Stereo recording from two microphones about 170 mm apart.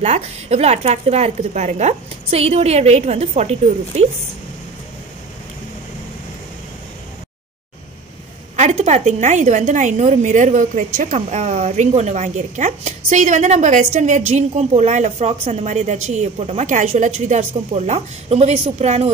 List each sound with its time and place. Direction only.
0.0 s speech: 40° right (ahead or behind)
8.5 s a woman's voice: 40° right (ahead or behind)